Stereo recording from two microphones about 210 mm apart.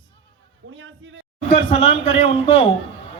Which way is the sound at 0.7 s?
65° right (ahead or behind).